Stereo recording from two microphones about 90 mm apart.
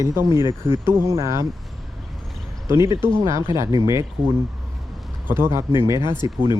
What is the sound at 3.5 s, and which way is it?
Speech, 40° right (ahead or behind).